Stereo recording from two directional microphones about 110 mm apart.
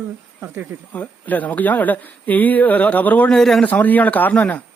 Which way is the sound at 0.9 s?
15° left (ahead or behind).